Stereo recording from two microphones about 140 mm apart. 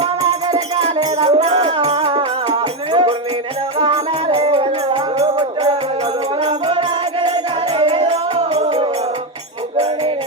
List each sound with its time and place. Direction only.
0.8 s music: 50° right (ahead or behind)
6.7 s music: 35° right (ahead or behind)